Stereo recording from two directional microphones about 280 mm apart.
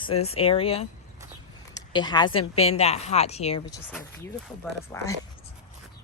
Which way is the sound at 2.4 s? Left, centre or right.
Left.